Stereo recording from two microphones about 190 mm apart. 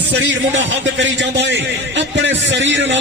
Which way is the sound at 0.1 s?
65° right (ahead or behind).